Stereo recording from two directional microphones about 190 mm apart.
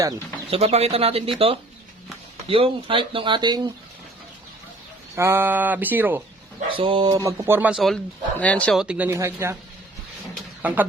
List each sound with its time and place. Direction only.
0.5 s speech: 35° right (ahead or behind)
2.5 s speech: 30° right (ahead or behind)
5.1 s speech: 15° right (ahead or behind)
6.7 s speech: 25° right (ahead or behind)
7.1 s speech: 15° right (ahead or behind)
10.3 s a sound: 10° right (ahead or behind)